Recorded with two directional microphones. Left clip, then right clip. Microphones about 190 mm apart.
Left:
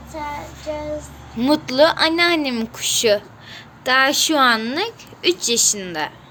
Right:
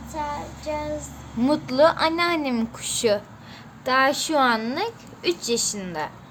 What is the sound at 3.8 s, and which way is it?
A woman's voice, 10° left (ahead or behind).